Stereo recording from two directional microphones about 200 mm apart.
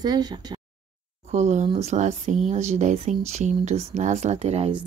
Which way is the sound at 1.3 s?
35° right (ahead or behind).